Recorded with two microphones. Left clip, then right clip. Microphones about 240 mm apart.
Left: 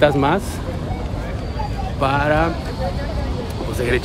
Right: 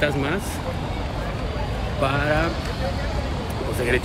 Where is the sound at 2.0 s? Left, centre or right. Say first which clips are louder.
Left 5 dB; centre.